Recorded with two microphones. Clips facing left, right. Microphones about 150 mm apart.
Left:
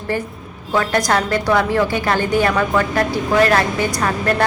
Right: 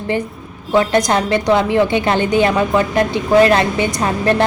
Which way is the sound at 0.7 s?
20° right (ahead or behind).